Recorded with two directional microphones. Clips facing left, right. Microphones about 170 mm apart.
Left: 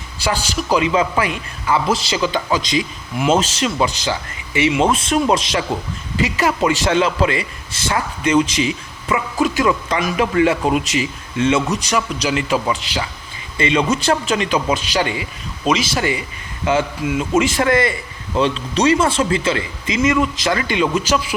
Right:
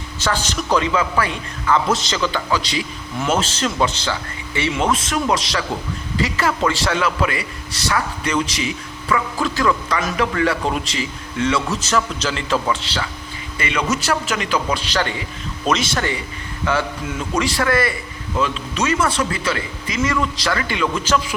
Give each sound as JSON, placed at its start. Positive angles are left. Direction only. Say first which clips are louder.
{"t": 0.3, "sound": "a man's voice", "louder": "left 1 dB", "side_deg": 10}
{"t": 13.6, "sound": "a man's voice", "louder": "left 5 dB", "side_deg": 25}
{"t": 17.3, "sound": "a man's voice", "louder": "left 3 dB", "side_deg": 20}